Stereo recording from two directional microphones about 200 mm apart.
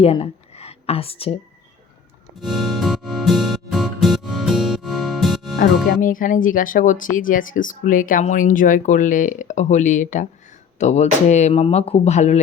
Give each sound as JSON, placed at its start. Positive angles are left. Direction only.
{"t": 0.0, "sound": "speech", "side_deg": 30}
{"t": 2.4, "sound": "music", "side_deg": 0}
{"t": 5.5, "sound": "speech", "side_deg": 45}